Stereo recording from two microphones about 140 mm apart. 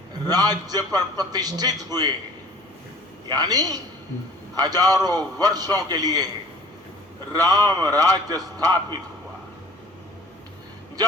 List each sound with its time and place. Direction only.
0.3 s a man's voice: 30° right (ahead or behind)
3.2 s a man's voice: 30° right (ahead or behind)
7.3 s a man's voice: 30° right (ahead or behind)